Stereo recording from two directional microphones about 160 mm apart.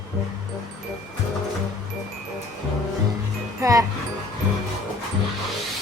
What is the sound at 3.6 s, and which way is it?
Music, 20° right (ahead or behind).